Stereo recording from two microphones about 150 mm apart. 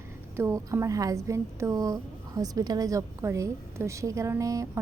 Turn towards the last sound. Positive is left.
turn(degrees=-20)  # may be behind; listen again after turning